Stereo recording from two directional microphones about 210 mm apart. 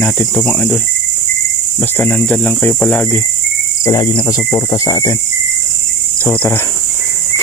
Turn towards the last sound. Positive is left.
turn(degrees=10)  # may be behind; listen again after turning